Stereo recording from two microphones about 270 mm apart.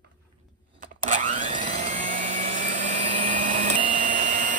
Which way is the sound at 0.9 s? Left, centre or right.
Right.